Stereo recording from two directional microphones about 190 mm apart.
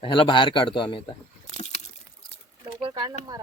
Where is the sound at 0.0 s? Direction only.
25° left (ahead or behind).